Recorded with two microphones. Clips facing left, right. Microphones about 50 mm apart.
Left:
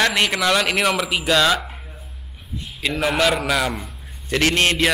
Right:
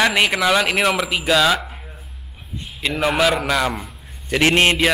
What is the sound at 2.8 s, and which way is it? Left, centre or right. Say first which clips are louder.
A man's voice: right 1 dB; centre.